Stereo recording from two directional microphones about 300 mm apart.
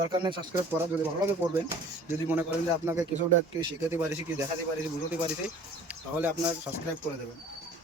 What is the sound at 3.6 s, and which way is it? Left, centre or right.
Speech, centre.